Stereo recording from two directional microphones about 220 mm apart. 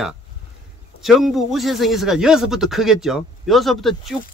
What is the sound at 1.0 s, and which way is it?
Speech, centre (ahead or behind).